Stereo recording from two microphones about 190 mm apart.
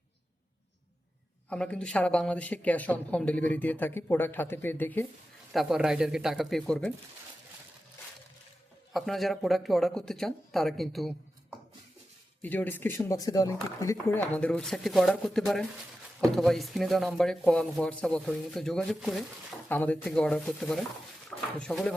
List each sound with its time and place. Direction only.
1.5 s speech: 5° left (ahead or behind)
5.5 s speech: centre (ahead or behind)
8.9 s speech: centre (ahead or behind)
12.4 s speech: 10° left (ahead or behind)
14.3 s speech: 5° left (ahead or behind)